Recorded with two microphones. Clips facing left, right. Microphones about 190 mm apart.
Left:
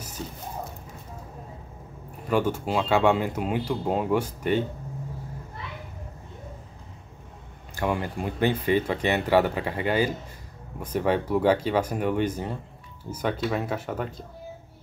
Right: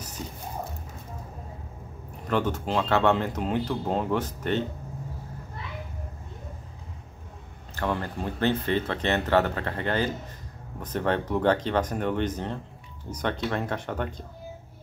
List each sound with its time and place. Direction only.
2.2 s speech: 10° left (ahead or behind)
7.7 s speech: 10° left (ahead or behind)